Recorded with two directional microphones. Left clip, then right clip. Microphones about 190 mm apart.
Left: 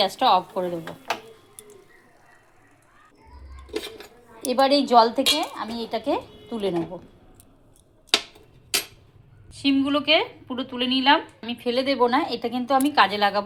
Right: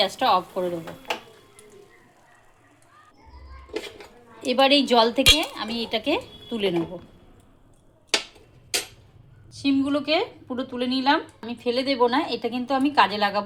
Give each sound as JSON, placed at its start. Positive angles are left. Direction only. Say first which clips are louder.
{"t": 0.0, "sound": "speech", "louder": "left 1 dB", "side_deg": 10}
{"t": 4.4, "sound": "speech", "louder": "right 1 dB", "side_deg": -5}
{"t": 9.5, "sound": "a woman's voice", "louder": "left 1 dB", "side_deg": -5}